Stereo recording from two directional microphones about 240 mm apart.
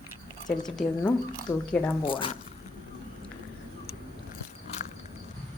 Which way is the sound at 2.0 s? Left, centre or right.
Left.